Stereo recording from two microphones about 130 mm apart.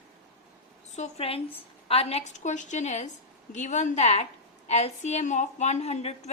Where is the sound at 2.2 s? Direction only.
70° left (ahead or behind).